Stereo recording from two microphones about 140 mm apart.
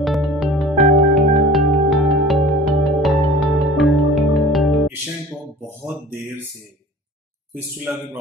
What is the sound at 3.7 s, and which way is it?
Music, centre (ahead or behind).